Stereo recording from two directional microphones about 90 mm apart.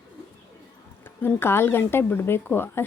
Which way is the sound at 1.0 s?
20° left (ahead or behind).